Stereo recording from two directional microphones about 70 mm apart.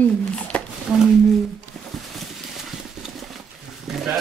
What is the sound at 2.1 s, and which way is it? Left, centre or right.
Horse, centre.